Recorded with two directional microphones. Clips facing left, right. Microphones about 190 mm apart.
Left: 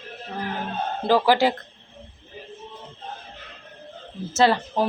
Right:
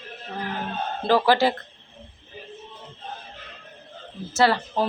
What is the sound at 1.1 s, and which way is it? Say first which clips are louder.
Speech: even; 15° left (ahead or behind).